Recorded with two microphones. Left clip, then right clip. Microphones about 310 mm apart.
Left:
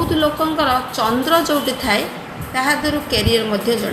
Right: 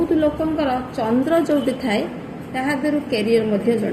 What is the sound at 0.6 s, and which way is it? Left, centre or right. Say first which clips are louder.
A woman's voice: left 5 dB; left.